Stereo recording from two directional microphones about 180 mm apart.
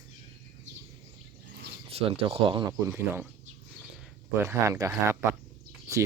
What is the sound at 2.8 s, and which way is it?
Speech, 10° right (ahead or behind).